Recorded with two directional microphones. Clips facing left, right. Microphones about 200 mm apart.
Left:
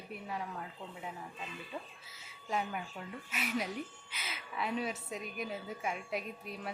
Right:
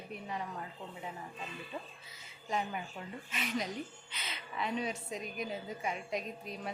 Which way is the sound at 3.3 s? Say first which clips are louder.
Even; 5° left (ahead or behind).